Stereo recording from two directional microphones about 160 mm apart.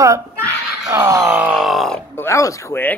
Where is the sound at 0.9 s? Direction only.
15° right (ahead or behind); by 2.0 s centre (ahead or behind).